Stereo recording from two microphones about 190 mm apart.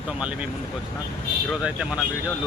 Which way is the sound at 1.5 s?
5° right (ahead or behind).